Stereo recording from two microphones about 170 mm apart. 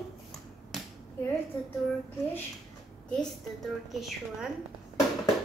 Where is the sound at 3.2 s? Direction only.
Centre (ahead or behind).